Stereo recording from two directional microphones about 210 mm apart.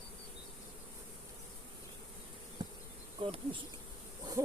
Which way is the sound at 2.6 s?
20° right (ahead or behind).